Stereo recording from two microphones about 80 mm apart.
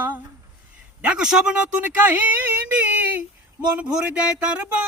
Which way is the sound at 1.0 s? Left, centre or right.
Centre.